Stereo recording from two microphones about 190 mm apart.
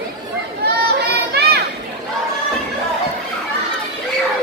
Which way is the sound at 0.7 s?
55° right (ahead or behind).